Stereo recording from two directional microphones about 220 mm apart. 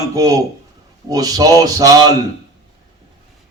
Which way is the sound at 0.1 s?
15° right (ahead or behind).